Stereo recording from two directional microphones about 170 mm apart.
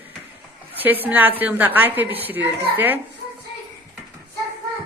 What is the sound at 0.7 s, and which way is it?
A woman's voice, 10° right (ahead or behind).